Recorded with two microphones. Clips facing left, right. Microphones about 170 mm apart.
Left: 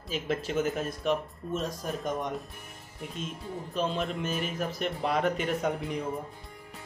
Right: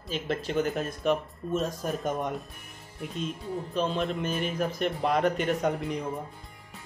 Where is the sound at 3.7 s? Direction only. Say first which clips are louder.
Right 2 dB; centre (ahead or behind).